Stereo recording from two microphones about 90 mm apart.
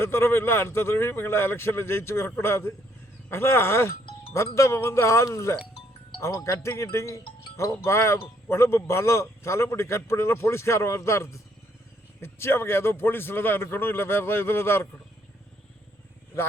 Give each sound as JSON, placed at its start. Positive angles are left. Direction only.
{"t": 0.0, "sound": "a man's voice", "side_deg": 25}